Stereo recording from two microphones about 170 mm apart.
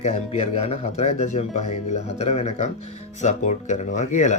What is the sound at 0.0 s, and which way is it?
Speech, 40° left (ahead or behind).